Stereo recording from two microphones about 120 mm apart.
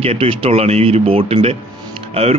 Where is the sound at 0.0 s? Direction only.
55° right (ahead or behind).